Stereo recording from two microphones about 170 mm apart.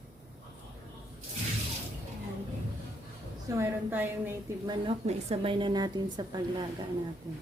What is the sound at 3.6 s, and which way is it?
Speech, 10° right (ahead or behind).